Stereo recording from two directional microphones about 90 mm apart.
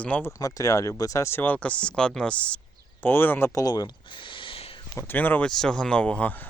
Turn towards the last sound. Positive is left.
turn(degrees=15)  # may be behind; listen again after turning